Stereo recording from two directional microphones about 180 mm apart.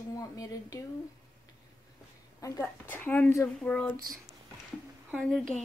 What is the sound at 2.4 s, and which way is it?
A woman's voice, 15° left (ahead or behind).